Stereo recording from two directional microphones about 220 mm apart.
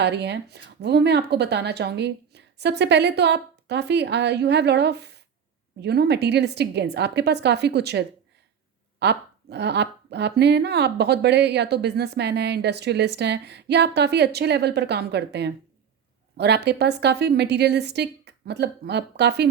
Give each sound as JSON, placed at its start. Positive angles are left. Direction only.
{"t": 0.0, "sound": "speech", "side_deg": -50}